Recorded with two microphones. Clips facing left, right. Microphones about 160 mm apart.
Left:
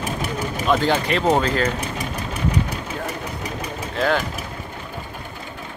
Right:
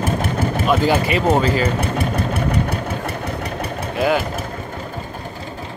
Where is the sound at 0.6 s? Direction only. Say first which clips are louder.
Right 1 dB; 5° right (ahead or behind).